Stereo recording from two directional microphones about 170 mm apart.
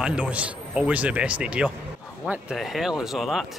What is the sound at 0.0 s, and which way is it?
A man's voice, 5° right (ahead or behind).